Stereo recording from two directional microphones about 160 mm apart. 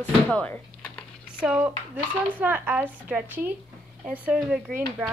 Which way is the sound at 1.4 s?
5° right (ahead or behind).